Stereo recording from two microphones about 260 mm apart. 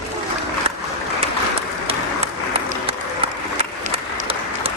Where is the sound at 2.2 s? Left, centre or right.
Right.